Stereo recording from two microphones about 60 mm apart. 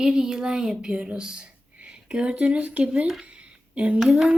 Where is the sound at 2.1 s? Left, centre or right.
Centre.